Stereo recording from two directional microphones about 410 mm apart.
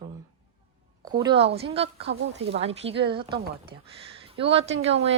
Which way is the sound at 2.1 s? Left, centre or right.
Right.